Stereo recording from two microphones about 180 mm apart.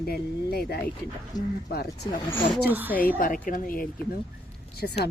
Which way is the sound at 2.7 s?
10° right (ahead or behind).